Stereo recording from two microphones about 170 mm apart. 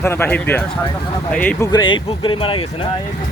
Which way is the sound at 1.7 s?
25° left (ahead or behind).